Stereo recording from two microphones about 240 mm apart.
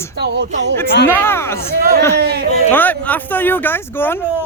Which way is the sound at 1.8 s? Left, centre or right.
Right.